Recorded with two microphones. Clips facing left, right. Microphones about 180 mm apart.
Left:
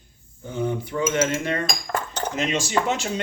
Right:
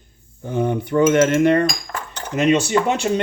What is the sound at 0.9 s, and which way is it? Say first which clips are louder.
Speech: right 10 dB; 60° right (ahead or behind).